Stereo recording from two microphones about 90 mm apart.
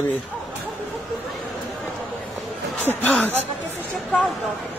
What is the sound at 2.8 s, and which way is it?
Speech, 20° left (ahead or behind).